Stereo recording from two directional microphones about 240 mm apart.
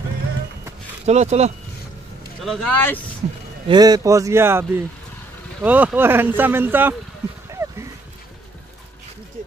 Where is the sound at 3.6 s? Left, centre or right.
Centre.